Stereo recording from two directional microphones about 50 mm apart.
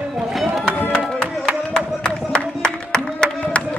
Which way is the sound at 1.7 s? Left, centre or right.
Centre.